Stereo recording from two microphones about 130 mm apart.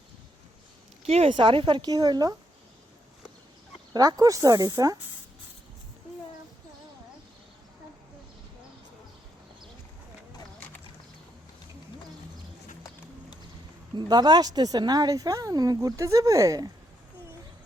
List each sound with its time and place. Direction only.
1.0 s speech: 50° right (ahead or behind); by 2.3 s 30° right (ahead or behind)
3.9 s a woman's voice: 30° right (ahead or behind)
13.9 s a woman's voice: 35° right (ahead or behind)